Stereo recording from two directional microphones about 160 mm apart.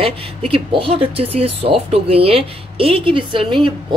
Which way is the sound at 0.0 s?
35° right (ahead or behind).